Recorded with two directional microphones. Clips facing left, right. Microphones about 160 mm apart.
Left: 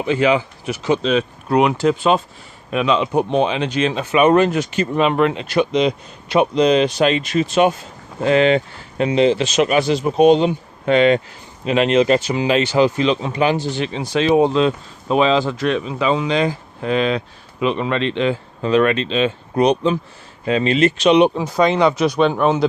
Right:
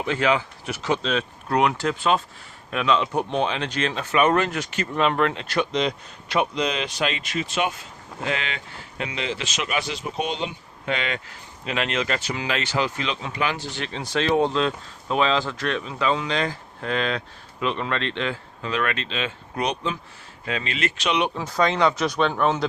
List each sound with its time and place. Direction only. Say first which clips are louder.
0.0 s speech: left 6 dB; 10° left (ahead or behind)
6.3 s speech: left 10 dB; 25° left (ahead or behind)
11.6 s speech: left 11 dB; 25° left (ahead or behind)
18.6 s speech: left 11 dB; 30° left (ahead or behind); by 22.6 s 10° left (ahead or behind)